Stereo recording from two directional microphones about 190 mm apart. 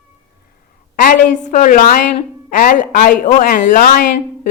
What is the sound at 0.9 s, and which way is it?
A woman's voice, 45° left (ahead or behind).